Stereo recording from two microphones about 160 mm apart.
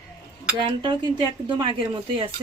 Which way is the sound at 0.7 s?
30° right (ahead or behind).